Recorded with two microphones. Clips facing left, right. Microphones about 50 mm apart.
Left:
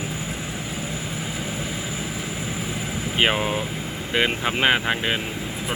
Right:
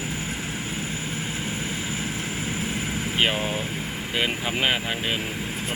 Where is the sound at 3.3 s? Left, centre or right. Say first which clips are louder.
Left 3 dB; left.